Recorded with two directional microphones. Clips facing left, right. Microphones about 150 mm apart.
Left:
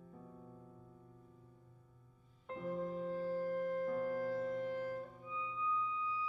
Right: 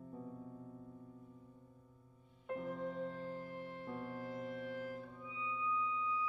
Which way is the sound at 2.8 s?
40° left (ahead or behind).